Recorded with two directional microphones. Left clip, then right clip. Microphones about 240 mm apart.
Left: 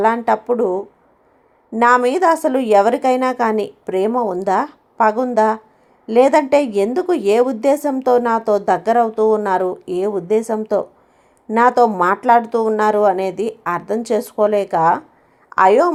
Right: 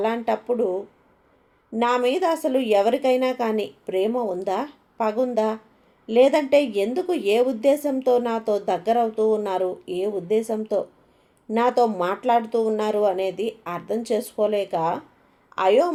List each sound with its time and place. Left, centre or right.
0.0 s a woman's voice: left